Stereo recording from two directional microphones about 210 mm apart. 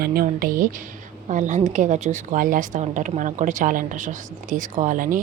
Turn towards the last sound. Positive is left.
turn(degrees=-40)  # may be behind; listen again after turning